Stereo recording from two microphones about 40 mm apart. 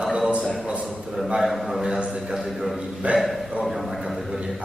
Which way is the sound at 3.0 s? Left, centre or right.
Right.